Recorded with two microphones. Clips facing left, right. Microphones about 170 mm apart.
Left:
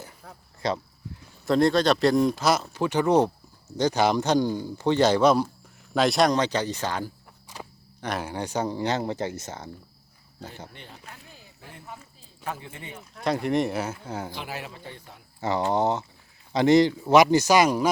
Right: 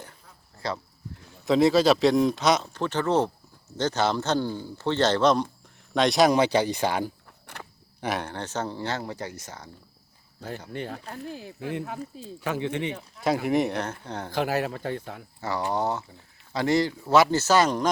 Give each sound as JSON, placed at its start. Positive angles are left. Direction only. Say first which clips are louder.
{"t": 0.6, "sound": "speech", "louder": "left 4 dB", "side_deg": 20}
{"t": 1.5, "sound": "a man's voice", "louder": "right 1 dB", "side_deg": 0}
{"t": 7.5, "sound": "cricket", "louder": "left 2 dB", "side_deg": -60}
{"t": 8.2, "sound": "a man's voice", "louder": "left 3 dB", "side_deg": 10}
{"t": 10.7, "sound": "speech", "louder": "right 11 dB", "side_deg": -65}
{"t": 13.2, "sound": "speech", "louder": "right 1 dB", "side_deg": -5}
{"t": 14.3, "sound": "speech", "louder": "right 10 dB", "side_deg": -45}
{"t": 15.4, "sound": "a man's voice", "louder": "left 4 dB", "side_deg": 20}